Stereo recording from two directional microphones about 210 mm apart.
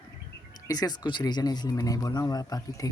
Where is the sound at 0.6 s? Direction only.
20° left (ahead or behind).